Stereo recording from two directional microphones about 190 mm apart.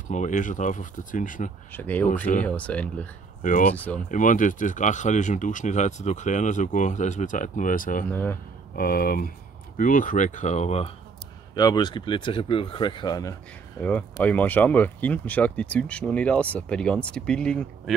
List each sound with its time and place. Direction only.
0.1 s speech: 40° left (ahead or behind)
1.7 s speech: 10° left (ahead or behind)
3.4 s speech: 45° left (ahead or behind)
3.7 s speech: 10° left (ahead or behind)
4.1 s speech: 45° left (ahead or behind)
8.1 s speech: 10° left (ahead or behind)
8.7 s speech: 50° left (ahead or behind); by 10.9 s 35° left (ahead or behind)
11.5 s speech: 20° left (ahead or behind); by 17.9 s 5° left (ahead or behind)